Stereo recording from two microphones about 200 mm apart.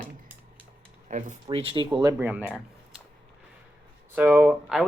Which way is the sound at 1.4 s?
25° right (ahead or behind).